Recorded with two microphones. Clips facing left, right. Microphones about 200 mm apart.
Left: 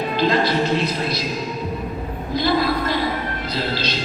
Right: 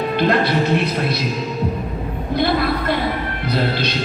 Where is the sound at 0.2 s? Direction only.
60° right (ahead or behind).